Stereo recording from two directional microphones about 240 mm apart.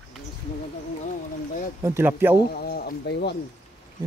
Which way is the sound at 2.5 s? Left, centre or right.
Left.